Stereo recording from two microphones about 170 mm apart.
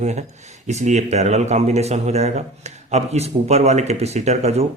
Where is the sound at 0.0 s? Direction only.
40° right (ahead or behind).